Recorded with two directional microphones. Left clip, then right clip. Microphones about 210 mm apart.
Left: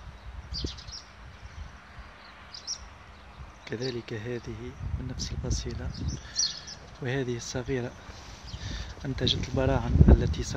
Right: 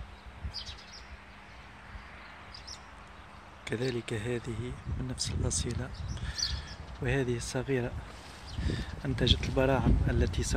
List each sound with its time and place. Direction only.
2.7 s a sound: 35° left (ahead or behind)
3.6 s speech: centre (ahead or behind)
6.2 s bird: centre (ahead or behind)
7.0 s speech: 10° left (ahead or behind)